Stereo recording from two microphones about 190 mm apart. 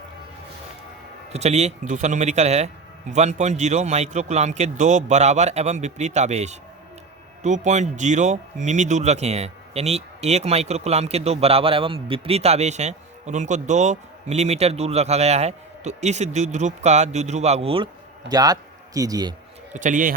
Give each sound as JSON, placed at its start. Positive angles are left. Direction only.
{"t": 1.3, "sound": "speech", "side_deg": -35}
{"t": 18.3, "sound": "a man's voice", "side_deg": -20}
{"t": 19.7, "sound": "a man's voice", "side_deg": -40}